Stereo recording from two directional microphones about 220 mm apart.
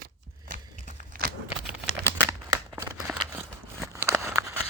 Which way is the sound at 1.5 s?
10° right (ahead or behind).